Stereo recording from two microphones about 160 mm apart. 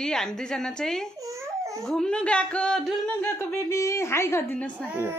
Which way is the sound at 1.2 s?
20° right (ahead or behind).